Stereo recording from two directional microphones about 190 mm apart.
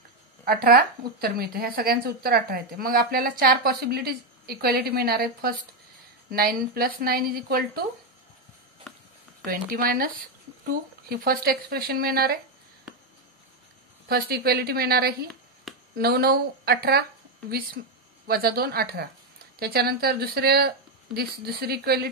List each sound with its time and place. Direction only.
0.5 s speech: 55° right (ahead or behind)
8.9 s a sound: centre (ahead or behind)
9.4 s speech: 45° right (ahead or behind)
14.0 s a woman's voice: 55° right (ahead or behind)
15.7 s a sound: centre (ahead or behind)
16.0 s a woman's voice: 55° right (ahead or behind)
18.2 s speech: 55° right (ahead or behind)